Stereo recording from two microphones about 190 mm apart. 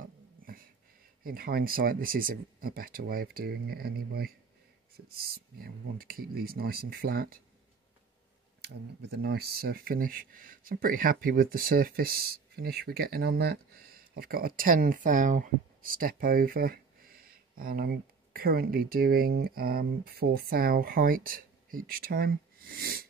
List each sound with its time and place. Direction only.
1.2 s speech: 50° right (ahead or behind)
9.1 s speech: 60° right (ahead or behind)